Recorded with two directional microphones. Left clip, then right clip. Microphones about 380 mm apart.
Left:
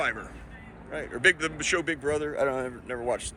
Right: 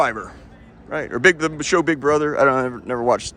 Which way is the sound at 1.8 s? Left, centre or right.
Right.